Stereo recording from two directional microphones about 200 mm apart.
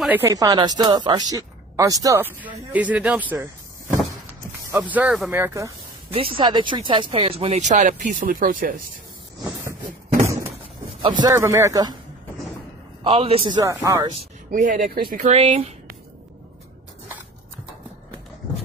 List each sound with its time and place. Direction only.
0.0 s a woman's voice: 10° right (ahead or behind)
4.6 s a woman's voice: 10° right (ahead or behind)
5.4 s a woman's voice: 15° right (ahead or behind); by 8.8 s 45° right (ahead or behind)
11.0 s a woman's voice: 25° right (ahead or behind)
13.0 s a man's voice: 25° right (ahead or behind)
14.5 s speech: 40° right (ahead or behind)